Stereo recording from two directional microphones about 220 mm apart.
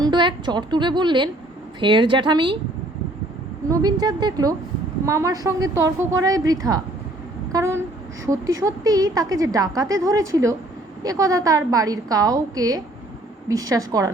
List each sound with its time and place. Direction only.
0.0 s a woman's voice: 20° right (ahead or behind)
3.7 s a woman's voice: 15° right (ahead or behind)